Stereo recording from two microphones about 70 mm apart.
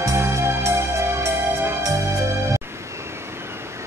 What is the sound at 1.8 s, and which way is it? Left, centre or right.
Music, right.